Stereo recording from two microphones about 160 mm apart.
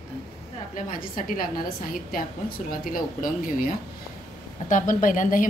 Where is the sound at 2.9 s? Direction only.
60° left (ahead or behind).